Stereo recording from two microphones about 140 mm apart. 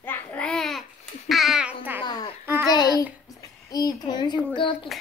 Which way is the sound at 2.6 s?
25° left (ahead or behind).